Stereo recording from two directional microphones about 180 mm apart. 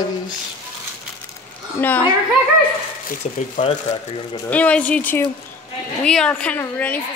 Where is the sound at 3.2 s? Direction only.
35° left (ahead or behind).